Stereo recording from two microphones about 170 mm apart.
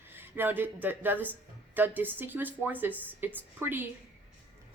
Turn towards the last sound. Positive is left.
turn(degrees=-10)  # may be behind; listen again after turning